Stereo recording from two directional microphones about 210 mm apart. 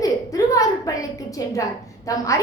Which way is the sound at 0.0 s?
15° left (ahead or behind).